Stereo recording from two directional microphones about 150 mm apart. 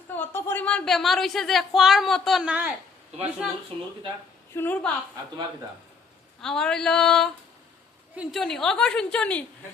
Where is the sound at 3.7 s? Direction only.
45° right (ahead or behind).